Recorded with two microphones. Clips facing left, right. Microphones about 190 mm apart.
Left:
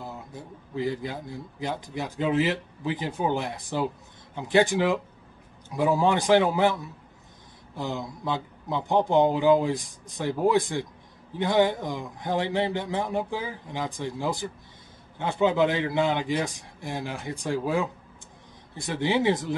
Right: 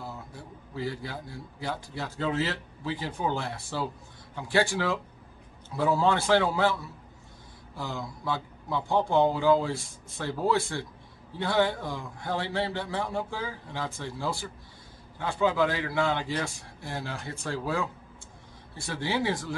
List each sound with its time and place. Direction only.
0.0 s speech: 20° left (ahead or behind)